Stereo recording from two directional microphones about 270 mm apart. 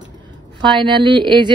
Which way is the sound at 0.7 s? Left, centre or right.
Centre.